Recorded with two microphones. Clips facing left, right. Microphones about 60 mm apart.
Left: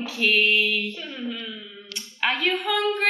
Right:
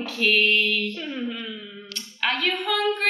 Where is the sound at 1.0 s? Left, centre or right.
Centre.